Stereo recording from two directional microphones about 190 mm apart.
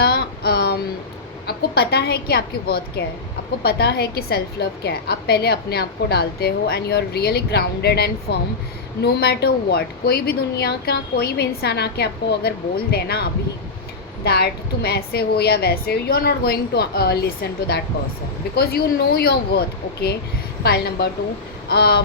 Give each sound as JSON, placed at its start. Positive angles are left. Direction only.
{"t": 0.0, "sound": "child singing", "side_deg": 60}
{"t": 1.5, "sound": "a woman's voice", "side_deg": 55}
{"t": 14.3, "sound": "a woman's voice", "side_deg": 55}